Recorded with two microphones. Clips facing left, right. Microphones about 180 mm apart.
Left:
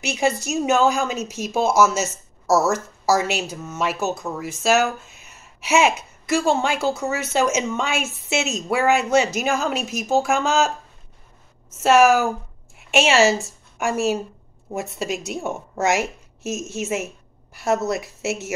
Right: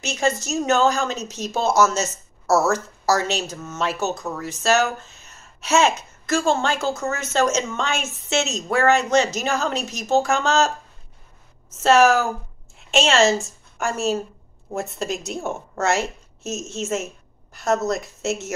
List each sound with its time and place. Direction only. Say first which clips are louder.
0.0 s speech: left 1 dB; 10° left (ahead or behind)
11.8 s speech: left 1 dB; 10° left (ahead or behind)